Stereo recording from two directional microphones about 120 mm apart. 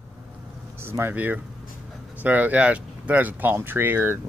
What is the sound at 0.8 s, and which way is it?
Speech, 20° right (ahead or behind).